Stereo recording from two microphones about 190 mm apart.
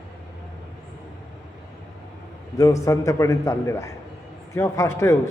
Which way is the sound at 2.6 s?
15° left (ahead or behind).